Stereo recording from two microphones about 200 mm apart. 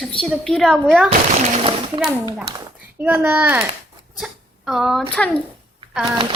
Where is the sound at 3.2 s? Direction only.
10° right (ahead or behind).